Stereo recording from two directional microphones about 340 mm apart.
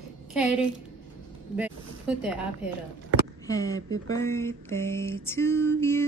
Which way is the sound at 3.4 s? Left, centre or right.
Centre.